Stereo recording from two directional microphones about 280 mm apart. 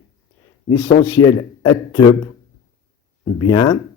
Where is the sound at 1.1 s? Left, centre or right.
Centre.